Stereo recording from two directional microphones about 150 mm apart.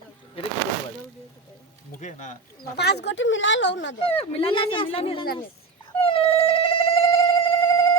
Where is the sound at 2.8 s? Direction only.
90° left.